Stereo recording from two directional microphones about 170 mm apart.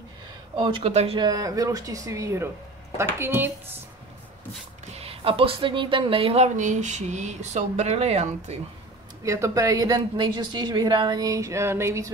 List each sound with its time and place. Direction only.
0.6 s a woman's voice: 30° right (ahead or behind); by 3.5 s 15° right (ahead or behind)
4.9 s speech: 35° right (ahead or behind)
9.2 s a woman's voice: 20° right (ahead or behind)